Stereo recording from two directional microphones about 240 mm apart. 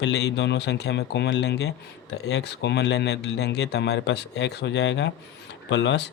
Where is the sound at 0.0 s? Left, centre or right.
Left.